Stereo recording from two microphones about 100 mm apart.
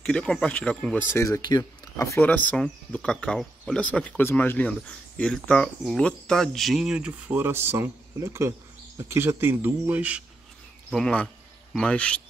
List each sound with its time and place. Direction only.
0.0 s speech: 10° left (ahead or behind)
1.1 s speech: 30° left (ahead or behind)
2.2 s speech: 15° left (ahead or behind); by 7.1 s 5° right (ahead or behind)
7.1 s speech: 20° right (ahead or behind)
10.9 s speech: 10° left (ahead or behind)